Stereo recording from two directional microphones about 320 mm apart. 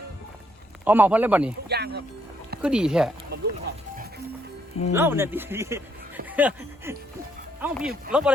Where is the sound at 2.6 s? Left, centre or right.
Centre.